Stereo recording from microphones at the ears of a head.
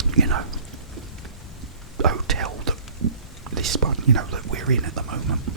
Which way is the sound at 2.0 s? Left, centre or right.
Right.